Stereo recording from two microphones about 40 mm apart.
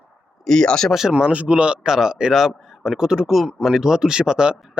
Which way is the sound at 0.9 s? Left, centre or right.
Centre.